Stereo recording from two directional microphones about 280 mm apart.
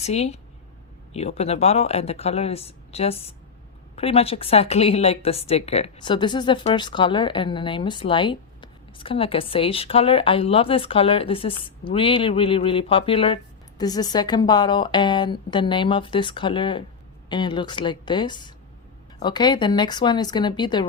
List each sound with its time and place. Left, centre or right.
0.0 s a woman's voice: left